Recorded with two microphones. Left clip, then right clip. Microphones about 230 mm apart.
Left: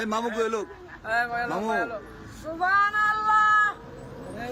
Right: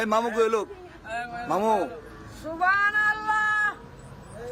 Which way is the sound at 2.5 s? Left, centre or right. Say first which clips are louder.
Even; centre.